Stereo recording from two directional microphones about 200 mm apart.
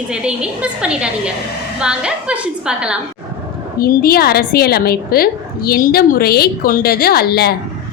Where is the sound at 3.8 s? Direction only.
50° left (ahead or behind).